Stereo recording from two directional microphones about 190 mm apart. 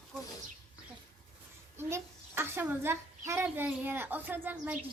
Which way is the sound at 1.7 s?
10° right (ahead or behind).